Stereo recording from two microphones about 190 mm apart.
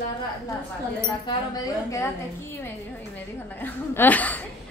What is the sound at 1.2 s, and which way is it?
A woman's voice, 15° left (ahead or behind).